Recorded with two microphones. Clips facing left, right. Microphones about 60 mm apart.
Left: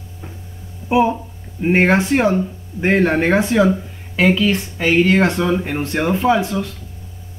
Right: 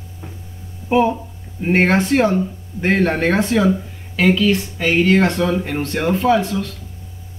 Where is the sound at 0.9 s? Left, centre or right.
Centre.